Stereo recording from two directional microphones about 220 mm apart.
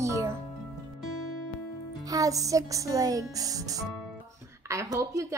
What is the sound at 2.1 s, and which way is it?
A woman's voice, 15° right (ahead or behind).